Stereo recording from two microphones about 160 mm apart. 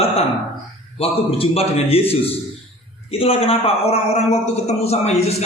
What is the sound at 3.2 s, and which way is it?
A man's voice, 35° left (ahead or behind).